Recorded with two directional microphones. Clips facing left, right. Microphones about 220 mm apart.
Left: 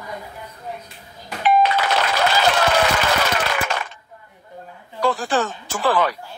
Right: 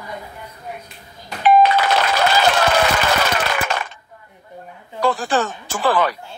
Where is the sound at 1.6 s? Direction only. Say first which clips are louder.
Right 3 dB; 45° right (ahead or behind).